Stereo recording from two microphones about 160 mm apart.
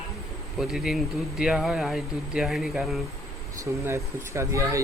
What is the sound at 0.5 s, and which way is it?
Speech, 5° right (ahead or behind).